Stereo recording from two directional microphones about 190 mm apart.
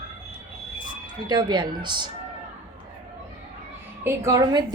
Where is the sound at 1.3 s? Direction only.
25° right (ahead or behind).